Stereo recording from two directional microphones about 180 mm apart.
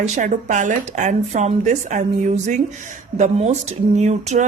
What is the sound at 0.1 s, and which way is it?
Speech, 45° right (ahead or behind).